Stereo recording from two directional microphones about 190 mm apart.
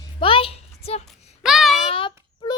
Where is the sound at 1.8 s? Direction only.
30° left (ahead or behind).